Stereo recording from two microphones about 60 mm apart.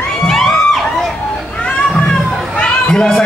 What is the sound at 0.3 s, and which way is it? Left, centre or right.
Music, centre.